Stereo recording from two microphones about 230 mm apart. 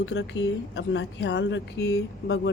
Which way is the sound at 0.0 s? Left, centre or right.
Left.